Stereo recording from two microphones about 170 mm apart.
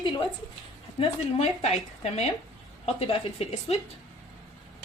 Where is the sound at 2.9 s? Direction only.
35° left (ahead or behind).